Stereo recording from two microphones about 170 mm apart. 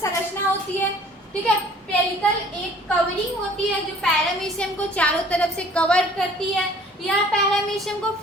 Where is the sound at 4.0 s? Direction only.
5° left (ahead or behind).